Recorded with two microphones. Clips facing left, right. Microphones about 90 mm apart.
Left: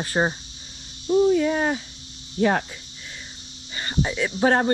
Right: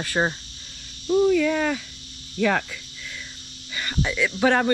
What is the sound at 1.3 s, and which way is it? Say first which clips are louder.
A woman's voice: even; 30° left (ahead or behind).